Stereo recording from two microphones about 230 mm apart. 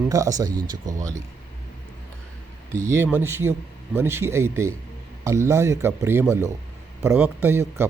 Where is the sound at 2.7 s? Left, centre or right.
Centre.